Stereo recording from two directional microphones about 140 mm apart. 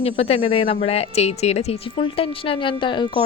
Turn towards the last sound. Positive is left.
turn(degrees=35)  # may be behind; listen again after turning